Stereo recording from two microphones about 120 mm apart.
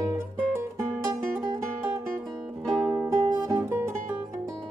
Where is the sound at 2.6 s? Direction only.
Centre (ahead or behind).